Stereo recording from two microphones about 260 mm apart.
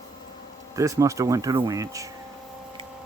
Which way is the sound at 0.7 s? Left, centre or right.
Centre.